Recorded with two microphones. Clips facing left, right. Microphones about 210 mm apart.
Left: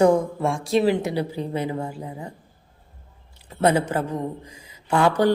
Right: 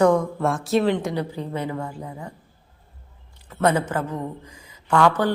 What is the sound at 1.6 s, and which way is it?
Speech, 20° left (ahead or behind).